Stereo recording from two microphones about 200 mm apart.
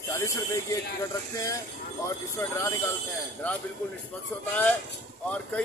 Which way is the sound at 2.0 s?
15° left (ahead or behind).